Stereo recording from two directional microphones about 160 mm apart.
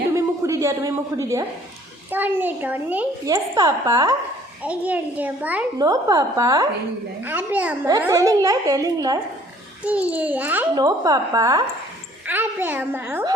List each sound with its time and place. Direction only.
0.1 s a sound: 20° right (ahead or behind)
2.0 s a child's voice: 10° right (ahead or behind)
3.2 s a woman's voice: 20° right (ahead or behind)
4.6 s a child's voice: 10° right (ahead or behind)
5.8 s a woman's voice: 25° right (ahead or behind)
7.9 s a woman's voice: 20° right (ahead or behind)
9.8 s a child's voice: 10° right (ahead or behind)
10.8 s a woman's voice: 25° right (ahead or behind)
12.2 s a child's voice: 10° right (ahead or behind)